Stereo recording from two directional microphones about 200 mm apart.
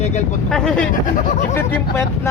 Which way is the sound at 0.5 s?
5° left (ahead or behind).